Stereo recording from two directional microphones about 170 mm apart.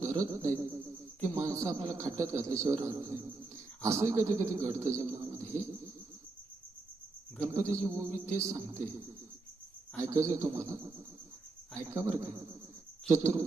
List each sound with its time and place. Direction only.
0.0 s a man's voice: 20° right (ahead or behind)
7.4 s a man's voice: 15° right (ahead or behind)
10.0 s a man's voice: 20° right (ahead or behind)